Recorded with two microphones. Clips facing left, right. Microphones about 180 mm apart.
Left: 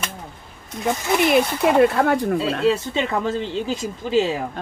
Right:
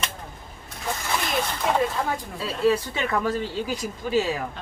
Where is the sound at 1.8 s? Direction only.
70° left (ahead or behind).